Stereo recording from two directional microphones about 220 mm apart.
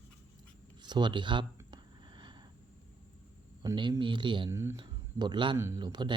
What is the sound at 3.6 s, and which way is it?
Speech, 20° right (ahead or behind).